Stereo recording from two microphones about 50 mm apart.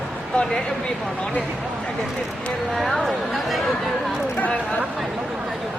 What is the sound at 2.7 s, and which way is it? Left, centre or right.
Speech, centre.